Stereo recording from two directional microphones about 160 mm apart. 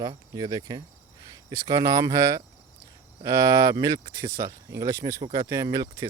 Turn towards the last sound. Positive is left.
turn(degrees=-20)  # may be behind; listen again after turning